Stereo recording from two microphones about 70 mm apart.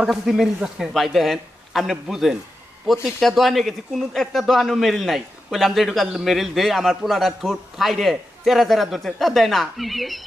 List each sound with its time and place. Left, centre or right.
0.0 s speech: centre